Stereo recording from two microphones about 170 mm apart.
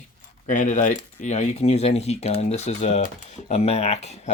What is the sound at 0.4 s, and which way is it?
Speech, 50° left (ahead or behind).